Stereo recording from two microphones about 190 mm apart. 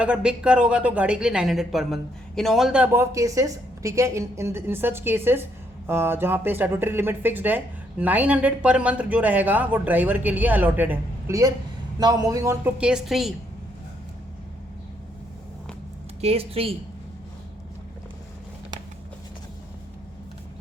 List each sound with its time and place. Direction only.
0.0 s speech: 5° right (ahead or behind)
16.2 s speech: 30° right (ahead or behind)